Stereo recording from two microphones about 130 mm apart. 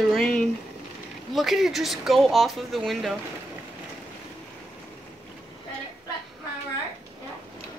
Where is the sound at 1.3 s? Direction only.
Centre (ahead or behind).